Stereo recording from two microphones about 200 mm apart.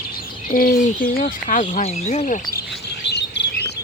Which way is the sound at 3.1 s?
60° left (ahead or behind).